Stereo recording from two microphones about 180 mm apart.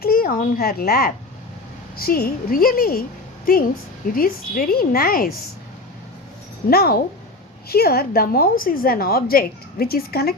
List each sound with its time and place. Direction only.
0.0 s a woman's voice: 55° left (ahead or behind)
6.7 s a woman's voice: 60° left (ahead or behind)